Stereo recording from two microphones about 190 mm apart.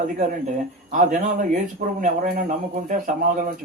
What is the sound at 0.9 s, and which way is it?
Speech, 40° right (ahead or behind).